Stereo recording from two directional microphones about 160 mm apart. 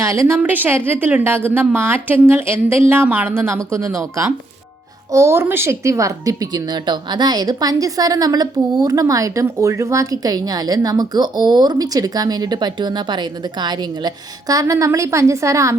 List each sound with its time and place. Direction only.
0.0 s a woman's voice: 20° right (ahead or behind)